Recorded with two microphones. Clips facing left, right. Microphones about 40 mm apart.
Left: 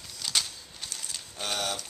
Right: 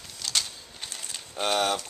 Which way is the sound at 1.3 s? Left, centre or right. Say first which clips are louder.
Right 7 dB; right.